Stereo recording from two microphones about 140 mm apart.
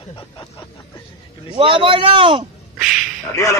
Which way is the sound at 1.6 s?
40° right (ahead or behind).